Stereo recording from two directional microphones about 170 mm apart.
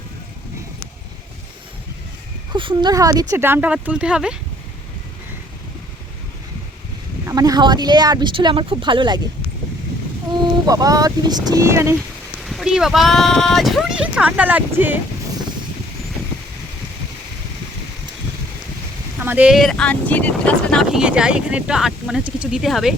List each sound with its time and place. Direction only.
2.5 s speech: 25° right (ahead or behind); by 4.4 s 5° right (ahead or behind)
7.3 s speech: 20° right (ahead or behind)
10.4 s speech: 20° right (ahead or behind)
11.9 s speech: centre (ahead or behind)
19.2 s speech: 10° right (ahead or behind); by 21.0 s 5° left (ahead or behind)
21.0 s speech: 5° right (ahead or behind)